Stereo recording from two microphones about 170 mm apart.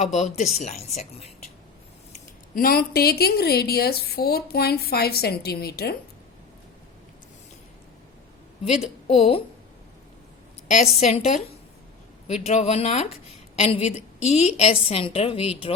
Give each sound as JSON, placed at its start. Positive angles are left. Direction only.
{"t": 0.0, "sound": "a woman's voice", "side_deg": 45}
{"t": 2.6, "sound": "a woman's voice", "side_deg": 60}
{"t": 8.8, "sound": "a woman's voice", "side_deg": 35}
{"t": 10.8, "sound": "a woman's voice", "side_deg": 40}